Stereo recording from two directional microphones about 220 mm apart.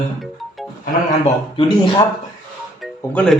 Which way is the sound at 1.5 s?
20° left (ahead or behind).